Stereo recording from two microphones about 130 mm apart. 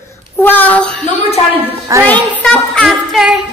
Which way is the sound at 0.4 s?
15° left (ahead or behind).